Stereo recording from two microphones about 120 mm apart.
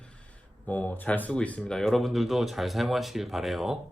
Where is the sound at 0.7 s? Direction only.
15° left (ahead or behind).